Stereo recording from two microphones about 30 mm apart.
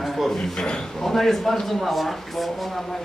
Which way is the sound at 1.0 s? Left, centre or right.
Centre.